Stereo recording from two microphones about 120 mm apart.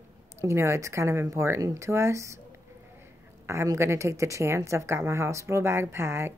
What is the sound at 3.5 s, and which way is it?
Speech, 25° right (ahead or behind).